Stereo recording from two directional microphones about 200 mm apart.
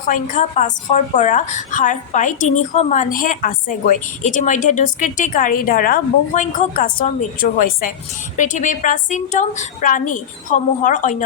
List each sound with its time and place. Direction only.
0.1 s a woman's voice: 40° left (ahead or behind)